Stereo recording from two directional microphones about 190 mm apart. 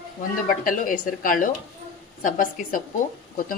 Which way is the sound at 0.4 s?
45° left (ahead or behind).